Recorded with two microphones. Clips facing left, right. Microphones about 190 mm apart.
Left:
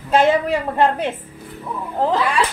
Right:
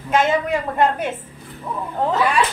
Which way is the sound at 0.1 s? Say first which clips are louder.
Left 3 dB; 30° left (ahead or behind).